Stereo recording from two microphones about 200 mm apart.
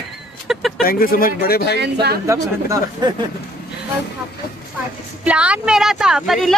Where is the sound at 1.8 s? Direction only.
55° right (ahead or behind).